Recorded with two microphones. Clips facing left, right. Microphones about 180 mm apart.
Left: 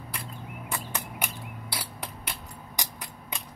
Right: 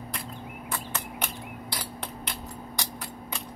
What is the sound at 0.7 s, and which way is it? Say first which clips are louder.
Cricket: even; 10° left (ahead or behind).